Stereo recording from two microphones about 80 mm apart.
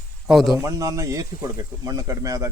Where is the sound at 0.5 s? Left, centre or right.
Right.